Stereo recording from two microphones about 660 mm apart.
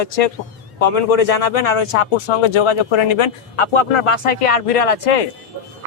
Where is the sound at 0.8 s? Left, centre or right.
Left.